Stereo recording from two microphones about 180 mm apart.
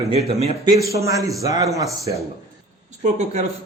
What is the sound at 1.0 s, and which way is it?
A man's voice, 15° right (ahead or behind).